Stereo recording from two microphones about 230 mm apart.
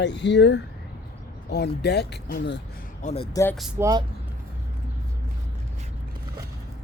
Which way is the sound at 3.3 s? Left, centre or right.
Centre.